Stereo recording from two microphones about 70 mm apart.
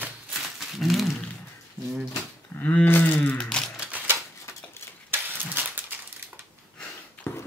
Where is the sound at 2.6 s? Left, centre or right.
Left.